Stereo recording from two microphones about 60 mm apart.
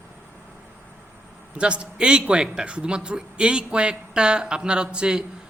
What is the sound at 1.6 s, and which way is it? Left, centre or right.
A man's voice, centre.